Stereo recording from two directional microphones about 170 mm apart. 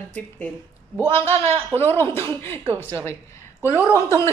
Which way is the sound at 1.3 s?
35° right (ahead or behind).